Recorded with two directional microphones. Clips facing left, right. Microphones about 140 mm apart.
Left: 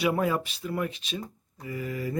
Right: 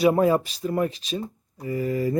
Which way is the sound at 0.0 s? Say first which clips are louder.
Right 7 dB; 35° right (ahead or behind).